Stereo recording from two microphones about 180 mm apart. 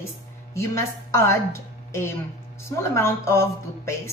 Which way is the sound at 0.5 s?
15° left (ahead or behind).